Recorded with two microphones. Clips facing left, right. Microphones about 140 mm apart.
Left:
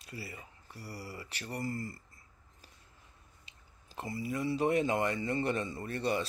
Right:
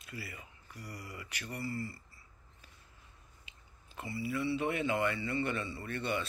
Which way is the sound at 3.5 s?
40° left (ahead or behind).